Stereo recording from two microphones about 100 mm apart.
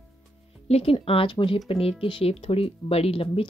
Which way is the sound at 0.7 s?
90° left.